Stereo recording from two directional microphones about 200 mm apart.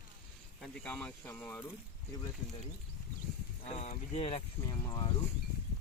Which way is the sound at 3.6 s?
35° left (ahead or behind).